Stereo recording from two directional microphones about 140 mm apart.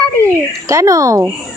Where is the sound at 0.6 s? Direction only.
25° right (ahead or behind).